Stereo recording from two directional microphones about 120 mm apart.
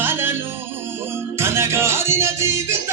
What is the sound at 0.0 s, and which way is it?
Music, 20° right (ahead or behind).